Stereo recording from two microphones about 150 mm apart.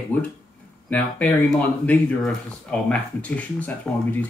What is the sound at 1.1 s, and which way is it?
Speech, 10° left (ahead or behind).